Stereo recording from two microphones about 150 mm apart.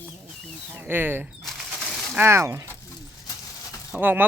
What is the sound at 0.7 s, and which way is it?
Speech, 15° right (ahead or behind).